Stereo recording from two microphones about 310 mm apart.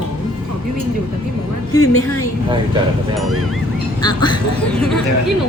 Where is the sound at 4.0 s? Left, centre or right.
Centre.